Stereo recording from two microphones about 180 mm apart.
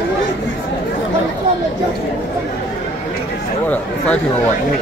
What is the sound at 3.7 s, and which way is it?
Speech, 5° left (ahead or behind).